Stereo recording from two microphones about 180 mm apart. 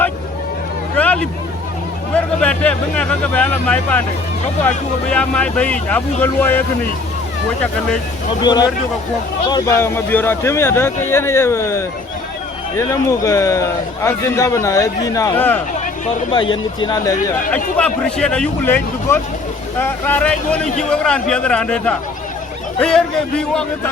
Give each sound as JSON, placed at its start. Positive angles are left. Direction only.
{"t": 0.9, "sound": "a sound", "side_deg": 5}
{"t": 2.1, "sound": "speech", "side_deg": 5}
{"t": 5.1, "sound": "speech", "side_deg": 5}
{"t": 8.4, "sound": "speech", "side_deg": 25}
{"t": 16.3, "sound": "speech", "side_deg": 25}
{"t": 17.5, "sound": "speech", "side_deg": 5}